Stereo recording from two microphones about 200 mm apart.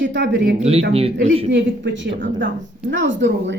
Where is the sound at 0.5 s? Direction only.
30° right (ahead or behind).